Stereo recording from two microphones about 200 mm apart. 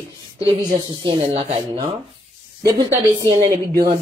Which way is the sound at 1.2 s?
35° right (ahead or behind).